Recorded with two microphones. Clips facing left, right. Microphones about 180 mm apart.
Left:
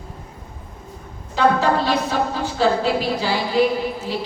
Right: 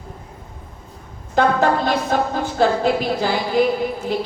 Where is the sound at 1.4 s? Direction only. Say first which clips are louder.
Right 1 dB; 50° right (ahead or behind).